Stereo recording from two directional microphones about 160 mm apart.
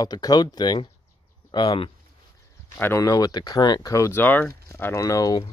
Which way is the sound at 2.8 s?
15° left (ahead or behind).